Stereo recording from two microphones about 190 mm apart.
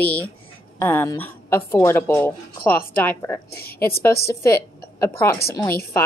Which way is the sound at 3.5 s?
55° left (ahead or behind).